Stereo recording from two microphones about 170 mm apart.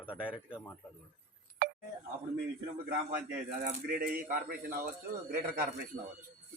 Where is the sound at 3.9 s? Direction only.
60° right (ahead or behind).